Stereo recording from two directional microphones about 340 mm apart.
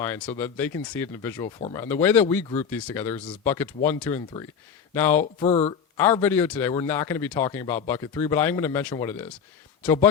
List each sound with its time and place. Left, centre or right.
0.0 s speech: centre
5.5 s speech: centre
6.0 s speech: centre